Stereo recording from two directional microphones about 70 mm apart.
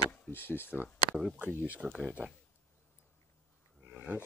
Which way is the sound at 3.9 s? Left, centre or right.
Right.